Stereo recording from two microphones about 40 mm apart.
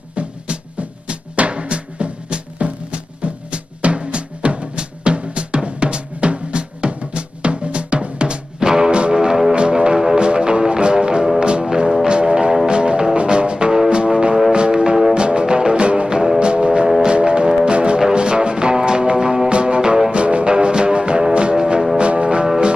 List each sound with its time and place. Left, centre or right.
0.1 s music: right